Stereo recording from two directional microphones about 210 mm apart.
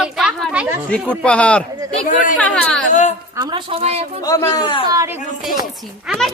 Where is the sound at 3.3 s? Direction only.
25° right (ahead or behind).